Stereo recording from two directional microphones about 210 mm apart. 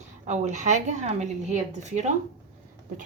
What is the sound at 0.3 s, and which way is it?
A woman's voice, 35° right (ahead or behind).